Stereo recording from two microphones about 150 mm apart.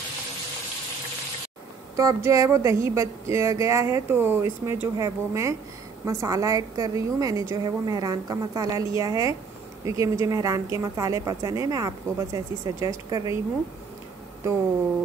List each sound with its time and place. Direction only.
2.0 s speech: 20° right (ahead or behind)